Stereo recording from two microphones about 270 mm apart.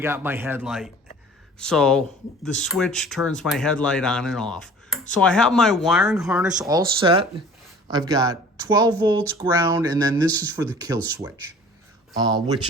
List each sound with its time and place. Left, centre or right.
0.0 s speech: centre
6.6 s speech: centre